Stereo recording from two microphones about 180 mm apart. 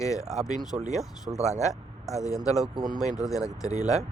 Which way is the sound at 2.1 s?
15° left (ahead or behind).